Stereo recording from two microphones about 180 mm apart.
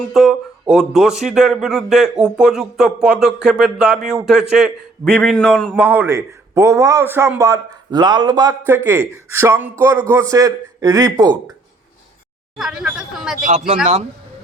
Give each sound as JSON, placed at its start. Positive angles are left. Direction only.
{"t": 0.1, "sound": "speech", "side_deg": 0}
{"t": 5.7, "sound": "a man's voice", "side_deg": -10}
{"t": 12.5, "sound": "speech", "side_deg": -5}
{"t": 13.4, "sound": "speech", "side_deg": -40}